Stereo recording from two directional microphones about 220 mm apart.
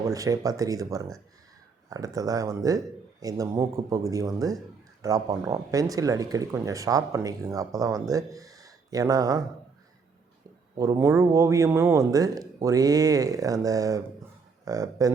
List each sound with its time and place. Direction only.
0.1 s speech: 15° right (ahead or behind)
10.8 s speech: 15° right (ahead or behind)